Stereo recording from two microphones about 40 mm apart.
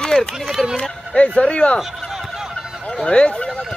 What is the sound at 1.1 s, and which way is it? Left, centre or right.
Speech, left.